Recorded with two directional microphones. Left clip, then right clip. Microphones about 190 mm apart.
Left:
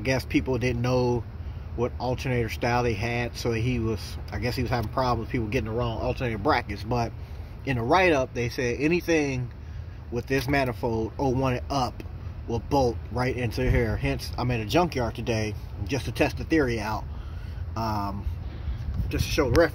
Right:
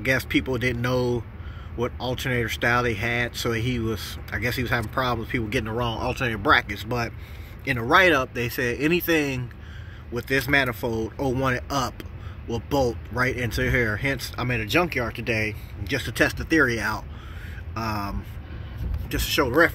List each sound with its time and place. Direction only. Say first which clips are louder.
0.0 s speech: right 3 dB; 5° left (ahead or behind)
5.7 s speech: right 2 dB; 10° right (ahead or behind)
6.5 s speech: right 7 dB; 10° left (ahead or behind)
15.9 s speech: right 3 dB; 5° left (ahead or behind)
17.7 s speech: even; 15° right (ahead or behind)
19.0 s speech: right 3 dB; centre (ahead or behind)